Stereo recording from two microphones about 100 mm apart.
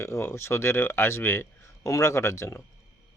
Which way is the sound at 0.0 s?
25° left (ahead or behind).